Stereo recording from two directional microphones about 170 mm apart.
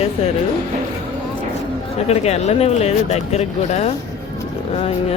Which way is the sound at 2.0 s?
40° left (ahead or behind).